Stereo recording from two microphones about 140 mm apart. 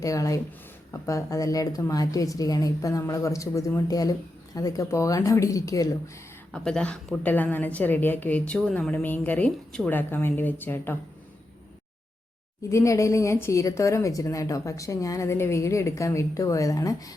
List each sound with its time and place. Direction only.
0.0 s a woman's voice: 25° left (ahead or behind)
6.5 s a woman's voice: 5° left (ahead or behind)
12.7 s a woman's voice: 20° left (ahead or behind)